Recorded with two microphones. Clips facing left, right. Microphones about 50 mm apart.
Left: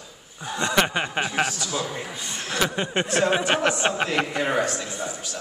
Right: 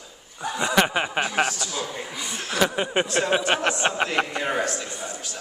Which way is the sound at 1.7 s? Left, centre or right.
Left.